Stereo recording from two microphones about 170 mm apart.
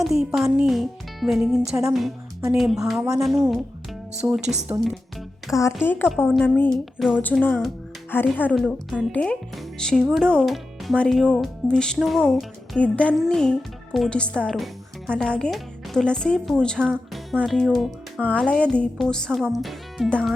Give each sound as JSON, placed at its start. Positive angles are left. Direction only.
{"t": 0.0, "sound": "music", "side_deg": 0}
{"t": 1.9, "sound": "speech", "side_deg": 0}
{"t": 4.2, "sound": "speech", "side_deg": -15}
{"t": 5.5, "sound": "speech", "side_deg": 20}